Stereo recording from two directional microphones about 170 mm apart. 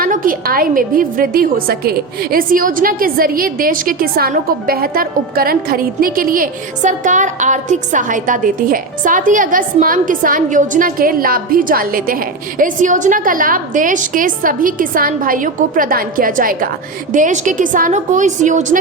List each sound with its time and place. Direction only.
0.0 s a woman's voice: 55° right (ahead or behind)